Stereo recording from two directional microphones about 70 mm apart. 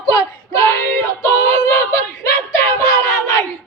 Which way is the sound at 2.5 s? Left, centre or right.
Left.